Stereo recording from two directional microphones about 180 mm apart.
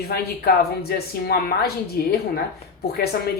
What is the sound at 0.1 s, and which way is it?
A woman's voice, 60° left (ahead or behind).